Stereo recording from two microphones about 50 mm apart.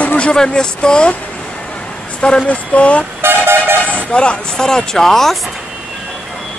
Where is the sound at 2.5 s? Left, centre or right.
Left.